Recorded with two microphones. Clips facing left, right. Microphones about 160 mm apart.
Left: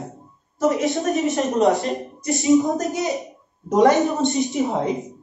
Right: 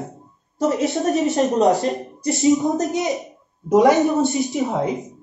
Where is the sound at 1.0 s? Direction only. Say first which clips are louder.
Right 2 dB; 40° right (ahead or behind).